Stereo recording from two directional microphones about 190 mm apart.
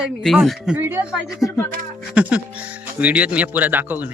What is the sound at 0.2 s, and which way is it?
Speech, centre (ahead or behind).